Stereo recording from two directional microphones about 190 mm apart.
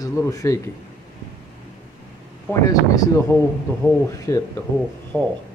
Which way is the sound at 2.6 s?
20° left (ahead or behind).